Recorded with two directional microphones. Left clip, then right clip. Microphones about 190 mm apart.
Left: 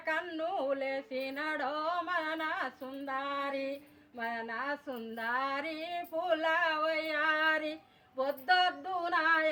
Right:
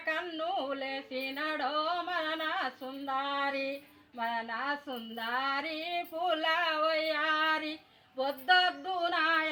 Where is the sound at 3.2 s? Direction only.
20° left (ahead or behind).